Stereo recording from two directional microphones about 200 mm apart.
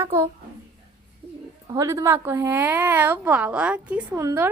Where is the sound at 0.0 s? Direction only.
15° right (ahead or behind).